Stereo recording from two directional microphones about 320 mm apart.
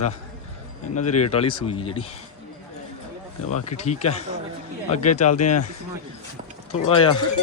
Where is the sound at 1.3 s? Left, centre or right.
Centre.